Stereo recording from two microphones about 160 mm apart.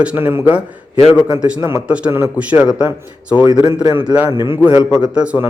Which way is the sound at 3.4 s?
25° right (ahead or behind).